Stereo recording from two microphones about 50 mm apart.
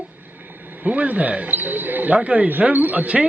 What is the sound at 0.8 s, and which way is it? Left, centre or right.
Speech, right.